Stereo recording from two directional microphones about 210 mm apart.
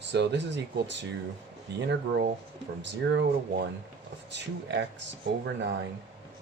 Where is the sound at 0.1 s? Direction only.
55° right (ahead or behind).